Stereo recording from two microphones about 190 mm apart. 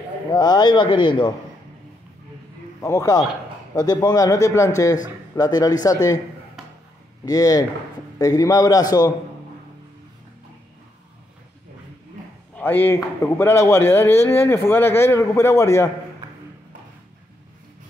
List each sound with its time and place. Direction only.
0.3 s speech: 20° left (ahead or behind)
2.8 s a man's voice: 15° left (ahead or behind)
7.2 s speech: 20° left (ahead or behind)
12.5 s a man's voice: 10° left (ahead or behind)